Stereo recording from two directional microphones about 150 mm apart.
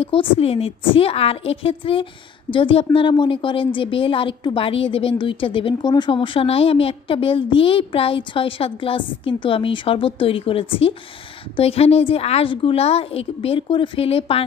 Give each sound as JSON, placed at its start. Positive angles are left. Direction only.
{"t": 0.0, "sound": "a woman's voice", "side_deg": 40}